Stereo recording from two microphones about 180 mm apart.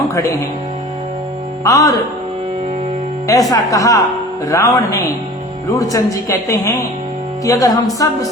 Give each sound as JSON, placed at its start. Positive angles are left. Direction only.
{"t": 0.1, "sound": "speech", "side_deg": 15}
{"t": 1.6, "sound": "a woman's voice", "side_deg": 20}
{"t": 3.2, "sound": "a woman's voice", "side_deg": 20}
{"t": 7.4, "sound": "music", "side_deg": 20}